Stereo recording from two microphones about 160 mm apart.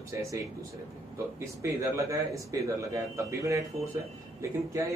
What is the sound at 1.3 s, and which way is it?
Speech, 20° right (ahead or behind).